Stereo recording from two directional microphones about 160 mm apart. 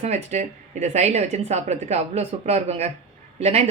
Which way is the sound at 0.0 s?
45° right (ahead or behind).